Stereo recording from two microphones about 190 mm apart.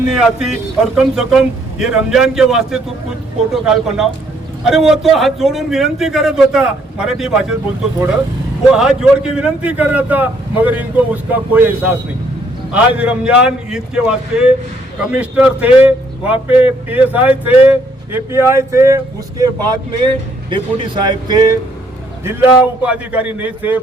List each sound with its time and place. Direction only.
0.1 s a man's voice: 5° right (ahead or behind)
8.7 s a man's voice: 5° right (ahead or behind); by 21.5 s 20° right (ahead or behind)
22.2 s speech: 10° right (ahead or behind)